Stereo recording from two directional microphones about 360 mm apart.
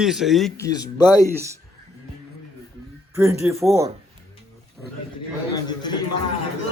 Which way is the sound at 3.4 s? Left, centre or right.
Centre.